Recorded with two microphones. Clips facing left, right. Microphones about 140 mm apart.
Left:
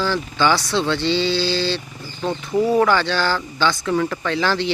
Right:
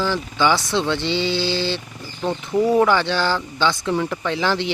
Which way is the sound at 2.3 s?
Centre (ahead or behind).